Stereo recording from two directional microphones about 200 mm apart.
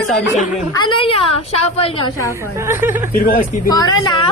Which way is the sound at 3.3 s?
45° left (ahead or behind).